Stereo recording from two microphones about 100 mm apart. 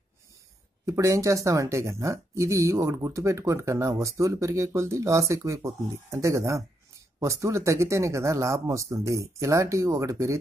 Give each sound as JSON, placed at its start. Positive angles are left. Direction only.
{"t": 0.8, "sound": "speech", "side_deg": -30}